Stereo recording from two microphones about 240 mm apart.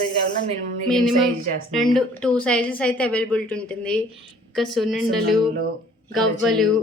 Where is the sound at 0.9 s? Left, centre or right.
Centre.